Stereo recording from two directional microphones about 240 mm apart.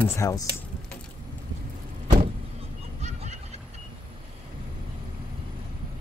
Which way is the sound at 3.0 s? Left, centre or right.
Right.